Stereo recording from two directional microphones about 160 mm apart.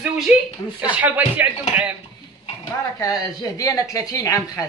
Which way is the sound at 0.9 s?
10° right (ahead or behind).